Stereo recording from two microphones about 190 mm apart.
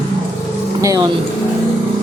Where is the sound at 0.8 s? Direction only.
15° right (ahead or behind).